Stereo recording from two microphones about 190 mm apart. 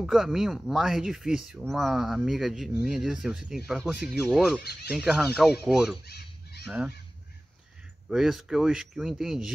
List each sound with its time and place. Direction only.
0.0 s speech: centre (ahead or behind)
6.0 s goose: 55° left (ahead or behind)
6.6 s speech: 5° right (ahead or behind)
8.1 s speech: centre (ahead or behind)